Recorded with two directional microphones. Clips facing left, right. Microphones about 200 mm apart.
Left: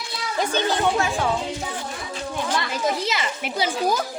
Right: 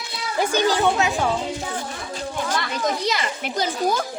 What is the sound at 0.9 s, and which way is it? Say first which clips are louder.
Speech: right 1 dB; 20° right (ahead or behind).